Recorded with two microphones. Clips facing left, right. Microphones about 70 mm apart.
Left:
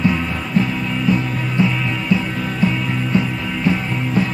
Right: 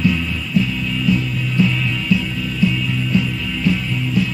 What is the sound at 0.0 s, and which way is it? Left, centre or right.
Music, left.